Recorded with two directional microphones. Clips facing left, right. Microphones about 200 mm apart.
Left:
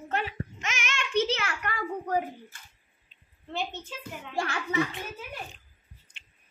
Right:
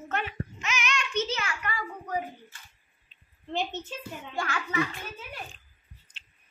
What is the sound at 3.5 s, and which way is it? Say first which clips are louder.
Speech: right 2 dB; 20° right (ahead or behind).